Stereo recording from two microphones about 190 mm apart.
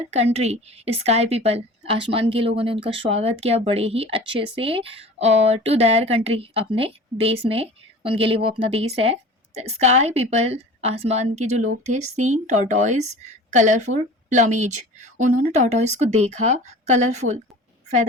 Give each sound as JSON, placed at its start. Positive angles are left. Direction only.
{"t": 0.1, "sound": "speech", "side_deg": -35}